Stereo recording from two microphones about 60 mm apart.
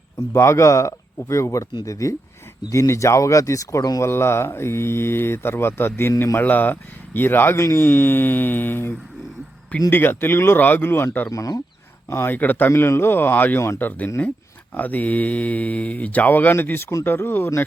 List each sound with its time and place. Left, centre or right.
0.3 s speech: left
4.0 s speech: left
7.6 s speech: left
7.9 s speech: left
11.3 s speech: left
12.0 s speech: left
12.3 s speech: left
12.7 s speech: left